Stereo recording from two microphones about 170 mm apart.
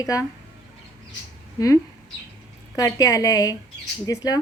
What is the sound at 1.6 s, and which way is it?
A woman's voice, 20° left (ahead or behind).